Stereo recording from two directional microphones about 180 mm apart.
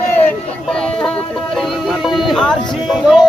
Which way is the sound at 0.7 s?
5° left (ahead or behind).